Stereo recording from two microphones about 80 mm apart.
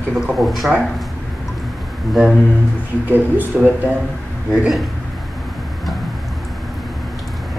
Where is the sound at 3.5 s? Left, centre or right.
Centre.